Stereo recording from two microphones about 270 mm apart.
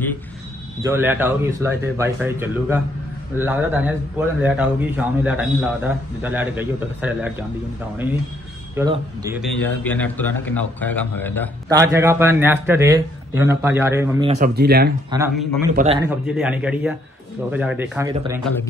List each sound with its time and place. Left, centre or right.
0.8 s a man's voice: centre
8.7 s a man's voice: centre
9.4 s a man's voice: centre
11.7 s a man's voice: centre
14.2 s speech: right
14.5 s speech: right
15.0 s a man's voice: centre
15.7 s speech: right
16.3 s a man's voice: centre